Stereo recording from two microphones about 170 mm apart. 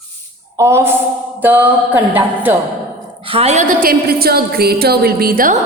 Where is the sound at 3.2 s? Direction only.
35° right (ahead or behind); by 5.6 s 55° right (ahead or behind).